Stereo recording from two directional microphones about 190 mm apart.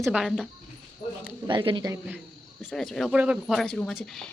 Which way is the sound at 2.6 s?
Centre (ahead or behind).